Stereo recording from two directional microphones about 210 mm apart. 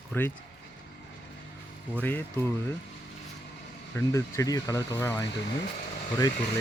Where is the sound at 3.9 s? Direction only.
15° left (ahead or behind).